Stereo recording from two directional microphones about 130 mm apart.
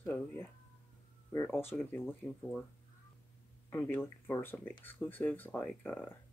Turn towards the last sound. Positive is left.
turn(degrees=10)  # may be behind; listen again after turning